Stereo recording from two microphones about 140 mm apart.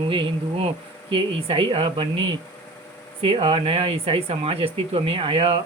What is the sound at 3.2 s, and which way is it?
Speech, 40° right (ahead or behind).